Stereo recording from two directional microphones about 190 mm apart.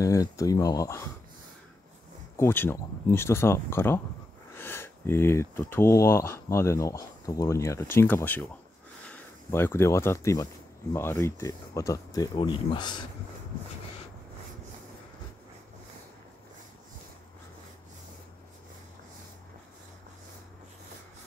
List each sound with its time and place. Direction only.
0.0 s speech: 15° left (ahead or behind)
2.3 s speech: 10° left (ahead or behind)